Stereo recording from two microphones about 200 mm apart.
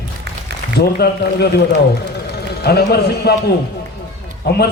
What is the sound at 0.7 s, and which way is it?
A man's voice, 50° left (ahead or behind).